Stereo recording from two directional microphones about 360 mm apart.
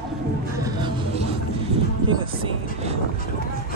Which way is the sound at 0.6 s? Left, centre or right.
Centre.